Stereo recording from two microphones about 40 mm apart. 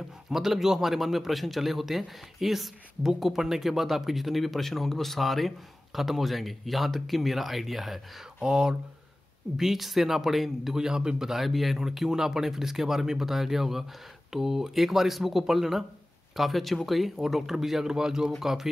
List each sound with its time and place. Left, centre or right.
0.3 s speech: centre
8.4 s speech: centre
9.6 s speech: centre